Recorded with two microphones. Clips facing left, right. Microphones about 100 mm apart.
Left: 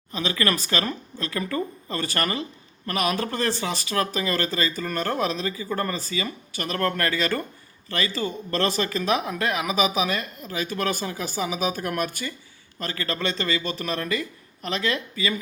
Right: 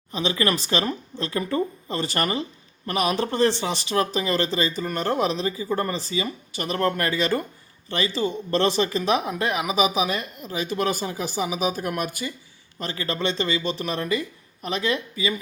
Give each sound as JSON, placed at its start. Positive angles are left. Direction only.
{"t": 0.1, "sound": "speech", "side_deg": -20}